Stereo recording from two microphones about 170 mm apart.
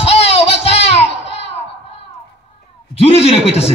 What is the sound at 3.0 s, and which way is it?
Speech, 35° left (ahead or behind).